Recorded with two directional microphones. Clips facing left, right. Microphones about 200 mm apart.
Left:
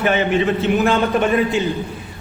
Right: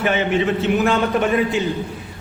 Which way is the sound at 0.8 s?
30° left (ahead or behind).